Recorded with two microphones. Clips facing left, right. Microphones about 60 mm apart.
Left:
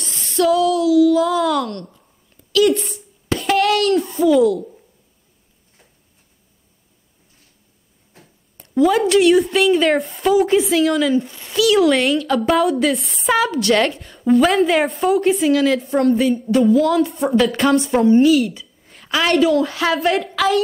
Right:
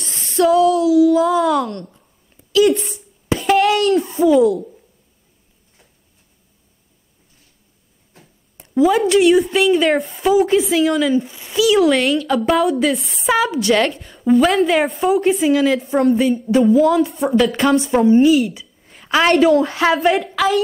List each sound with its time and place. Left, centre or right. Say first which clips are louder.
0.4 s female singing: right 2 dB; right
0.9 s a child's voice: right 1 dB; centre
3.3 s a sound: right 2 dB; centre
4.2 s a child's voice: right 1 dB; centre
8.5 s a woman's voice: right 1 dB; centre
19.0 s a woman's voice: right 4 dB; right
19.3 s a woman's voice: right 1 dB; right
19.7 s speech: right 3 dB; right
20.0 s a woman's voice: right 2 dB; centre